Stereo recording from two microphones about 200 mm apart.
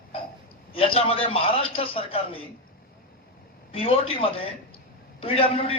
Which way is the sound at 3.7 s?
30° left (ahead or behind).